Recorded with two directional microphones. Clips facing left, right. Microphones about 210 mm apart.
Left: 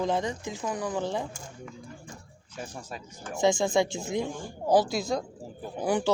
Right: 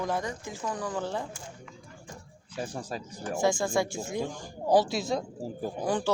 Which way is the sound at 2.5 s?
35° right (ahead or behind).